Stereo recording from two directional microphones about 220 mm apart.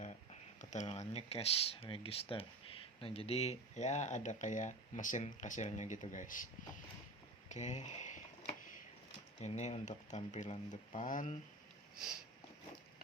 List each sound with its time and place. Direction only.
0.0 s speech: 35° left (ahead or behind)
7.4 s a sound: 30° left (ahead or behind)
9.4 s speech: 30° left (ahead or behind)